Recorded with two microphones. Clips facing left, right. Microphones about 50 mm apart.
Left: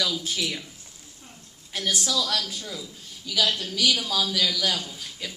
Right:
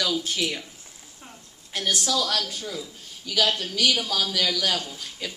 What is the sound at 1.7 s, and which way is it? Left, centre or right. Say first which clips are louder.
A man's voice: right 1 dB; right.